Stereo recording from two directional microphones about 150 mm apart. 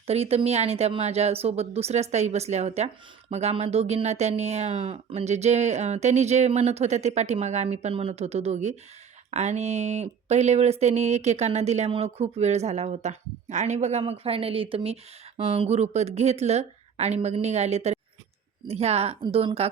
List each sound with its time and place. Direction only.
0.1 s speech: 45° right (ahead or behind)